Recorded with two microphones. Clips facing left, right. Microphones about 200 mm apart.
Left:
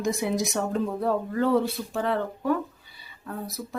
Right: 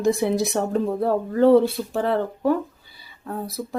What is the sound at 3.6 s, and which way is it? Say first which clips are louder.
Speech: right 6 dB; 35° right (ahead or behind).